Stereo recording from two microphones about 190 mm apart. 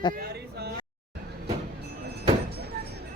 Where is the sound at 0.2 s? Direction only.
60° right (ahead or behind).